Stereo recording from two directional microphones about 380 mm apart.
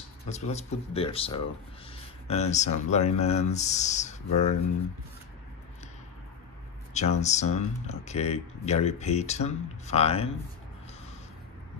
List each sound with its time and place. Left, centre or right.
0.3 s speech: centre
6.9 s speech: centre